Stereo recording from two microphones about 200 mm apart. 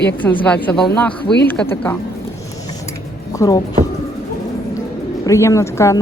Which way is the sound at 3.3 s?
20° left (ahead or behind).